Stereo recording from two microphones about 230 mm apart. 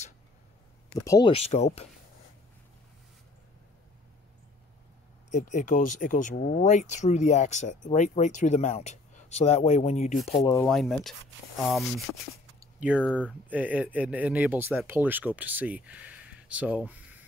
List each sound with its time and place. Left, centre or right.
0.9 s speech: centre
1.3 s speech: left
5.3 s speech: left
10.4 s speech: centre
10.7 s speech: centre